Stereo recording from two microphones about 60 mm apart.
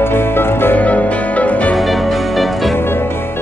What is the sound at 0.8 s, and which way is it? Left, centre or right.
Music, left.